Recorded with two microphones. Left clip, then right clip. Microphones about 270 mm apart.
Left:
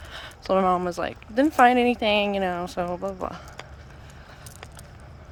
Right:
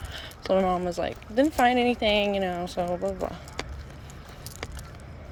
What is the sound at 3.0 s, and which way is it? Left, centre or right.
Speech, left.